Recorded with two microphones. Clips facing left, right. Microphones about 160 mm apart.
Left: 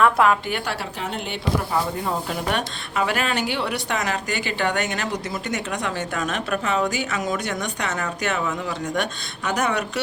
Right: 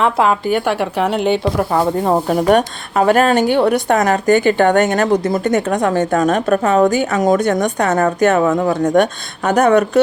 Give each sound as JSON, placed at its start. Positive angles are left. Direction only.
{"t": 0.0, "sound": "a woman's voice", "side_deg": -25}
{"t": 0.4, "sound": "speech", "side_deg": -50}
{"t": 1.7, "sound": "speech", "side_deg": -60}